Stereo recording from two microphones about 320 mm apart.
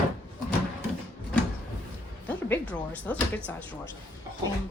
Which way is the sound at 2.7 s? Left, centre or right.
Centre.